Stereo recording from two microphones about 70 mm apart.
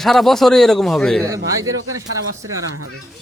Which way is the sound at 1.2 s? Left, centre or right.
Right.